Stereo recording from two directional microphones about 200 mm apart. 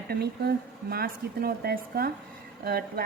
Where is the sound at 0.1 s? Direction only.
50° right (ahead or behind).